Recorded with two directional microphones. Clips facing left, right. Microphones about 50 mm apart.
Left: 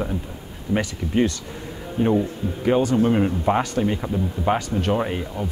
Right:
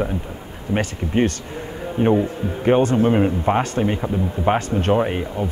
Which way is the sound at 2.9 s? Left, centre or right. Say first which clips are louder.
Right 2 dB; centre.